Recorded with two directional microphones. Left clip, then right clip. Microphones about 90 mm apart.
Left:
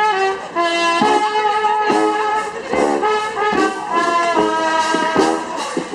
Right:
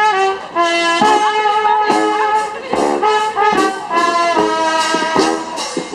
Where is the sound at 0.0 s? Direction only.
40° right (ahead or behind).